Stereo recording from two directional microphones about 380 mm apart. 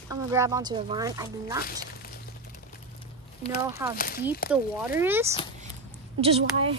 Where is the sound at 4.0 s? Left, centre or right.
Left.